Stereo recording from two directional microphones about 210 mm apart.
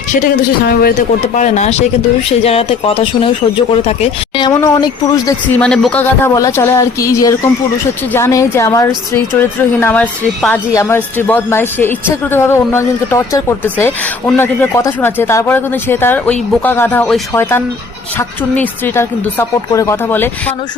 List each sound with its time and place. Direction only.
0.7 s speech: 45° left (ahead or behind); by 5.3 s 15° left (ahead or behind)
5.5 s a woman's voice: 5° left (ahead or behind)